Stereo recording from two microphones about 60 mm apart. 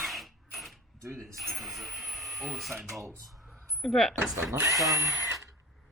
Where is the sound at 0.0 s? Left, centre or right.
Centre.